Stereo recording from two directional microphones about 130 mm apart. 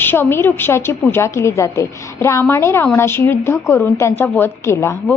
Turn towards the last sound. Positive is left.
turn(degrees=20)  # may be behind; listen again after turning